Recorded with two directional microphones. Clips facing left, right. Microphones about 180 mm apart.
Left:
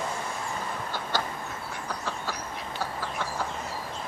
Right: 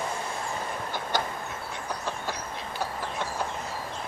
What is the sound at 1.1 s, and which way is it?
Train, 15° right (ahead or behind).